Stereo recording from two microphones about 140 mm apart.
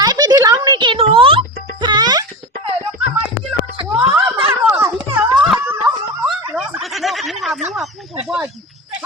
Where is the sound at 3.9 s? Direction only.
15° right (ahead or behind).